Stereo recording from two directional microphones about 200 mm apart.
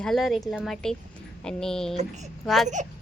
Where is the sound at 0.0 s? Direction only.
Centre (ahead or behind).